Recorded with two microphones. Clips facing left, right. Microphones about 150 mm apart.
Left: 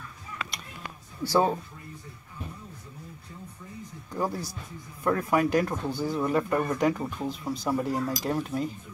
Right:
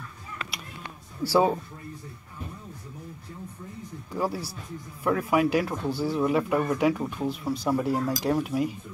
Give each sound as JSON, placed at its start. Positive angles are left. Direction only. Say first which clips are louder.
{"t": 1.2, "sound": "speech", "louder": "right 2 dB", "side_deg": -10}
{"t": 4.1, "sound": "speech", "louder": "right 1 dB", "side_deg": -5}